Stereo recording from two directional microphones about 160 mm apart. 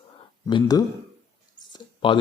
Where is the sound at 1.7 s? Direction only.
30° left (ahead or behind).